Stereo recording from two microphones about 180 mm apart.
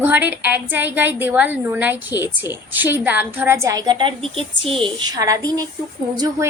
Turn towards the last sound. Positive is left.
turn(degrees=-20)  # may be behind; listen again after turning